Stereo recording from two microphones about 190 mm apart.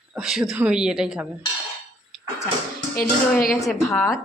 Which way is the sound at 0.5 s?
5° right (ahead or behind).